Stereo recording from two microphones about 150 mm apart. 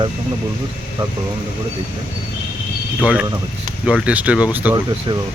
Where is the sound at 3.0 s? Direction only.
10° right (ahead or behind).